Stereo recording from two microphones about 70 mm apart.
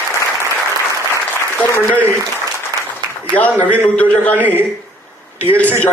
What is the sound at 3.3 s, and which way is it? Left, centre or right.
A man's voice, left.